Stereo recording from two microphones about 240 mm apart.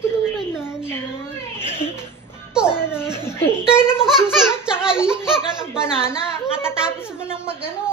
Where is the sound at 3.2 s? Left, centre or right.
Centre.